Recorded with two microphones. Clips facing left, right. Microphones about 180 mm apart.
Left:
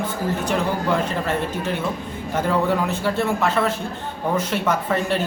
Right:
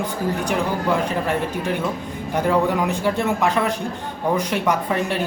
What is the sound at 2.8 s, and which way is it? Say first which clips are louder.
Speech: right 1 dB; 15° right (ahead or behind).